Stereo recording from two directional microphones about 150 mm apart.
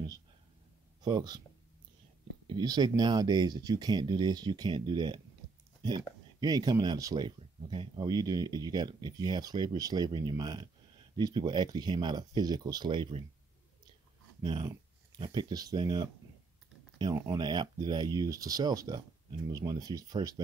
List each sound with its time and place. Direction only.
1.0 s speech: 30° right (ahead or behind)
2.4 s speech: 30° right (ahead or behind)
14.4 s speech: 30° right (ahead or behind)